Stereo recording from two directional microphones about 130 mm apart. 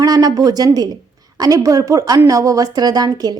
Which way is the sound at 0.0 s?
30° right (ahead or behind).